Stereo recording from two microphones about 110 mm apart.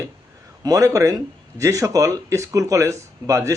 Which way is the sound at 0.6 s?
30° right (ahead or behind).